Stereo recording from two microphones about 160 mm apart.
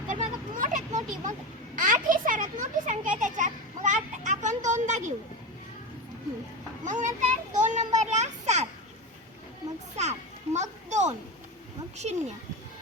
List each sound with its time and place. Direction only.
0.1 s a sound: 55° right (ahead or behind)
1.7 s children playing: 60° right (ahead or behind)
6.8 s children playing: 50° right (ahead or behind)
10.0 s children playing: 45° right (ahead or behind)